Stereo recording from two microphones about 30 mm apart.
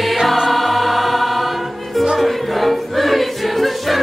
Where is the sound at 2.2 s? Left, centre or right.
Centre.